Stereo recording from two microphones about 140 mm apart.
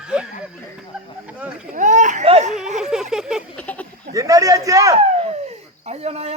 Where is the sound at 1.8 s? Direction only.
60° right (ahead or behind).